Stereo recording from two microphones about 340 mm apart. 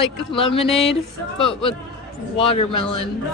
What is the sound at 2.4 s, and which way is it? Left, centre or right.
Speech, centre.